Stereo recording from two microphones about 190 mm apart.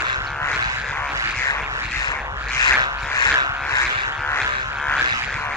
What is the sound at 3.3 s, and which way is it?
Vehicle, 15° right (ahead or behind).